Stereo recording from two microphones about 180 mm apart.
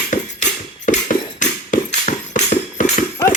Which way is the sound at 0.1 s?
45° left (ahead or behind).